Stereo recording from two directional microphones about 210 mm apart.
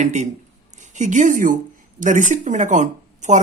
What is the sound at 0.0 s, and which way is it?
Speech, 35° right (ahead or behind).